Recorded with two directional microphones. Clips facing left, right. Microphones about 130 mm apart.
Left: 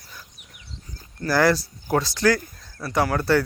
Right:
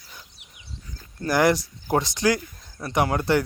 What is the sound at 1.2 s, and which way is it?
Speech, 20° right (ahead or behind).